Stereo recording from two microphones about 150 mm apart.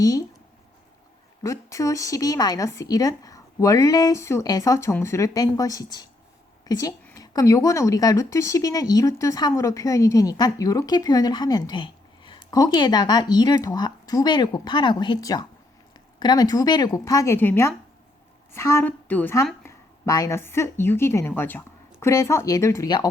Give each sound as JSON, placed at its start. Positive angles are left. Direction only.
{"t": 0.0, "sound": "speech", "side_deg": 25}
{"t": 1.4, "sound": "a woman's voice", "side_deg": 20}